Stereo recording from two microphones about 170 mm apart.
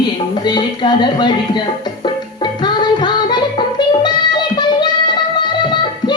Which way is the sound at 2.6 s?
25° left (ahead or behind).